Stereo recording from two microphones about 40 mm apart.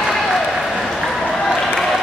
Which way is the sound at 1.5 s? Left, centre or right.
Centre.